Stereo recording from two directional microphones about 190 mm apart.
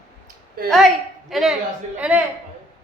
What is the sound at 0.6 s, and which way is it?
Speech, 50° right (ahead or behind).